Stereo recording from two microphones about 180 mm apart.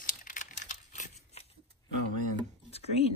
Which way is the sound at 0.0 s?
50° left (ahead or behind).